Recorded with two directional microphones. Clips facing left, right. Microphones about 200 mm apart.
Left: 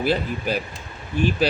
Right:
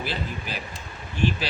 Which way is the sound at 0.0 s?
50° left (ahead or behind).